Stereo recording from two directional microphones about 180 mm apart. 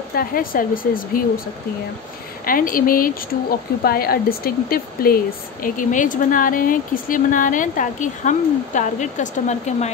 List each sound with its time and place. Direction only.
0.1 s speech: 55° left (ahead or behind)
2.4 s speech: 50° left (ahead or behind)